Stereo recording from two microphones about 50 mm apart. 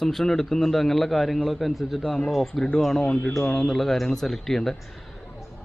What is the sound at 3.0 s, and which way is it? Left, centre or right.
Speech, left.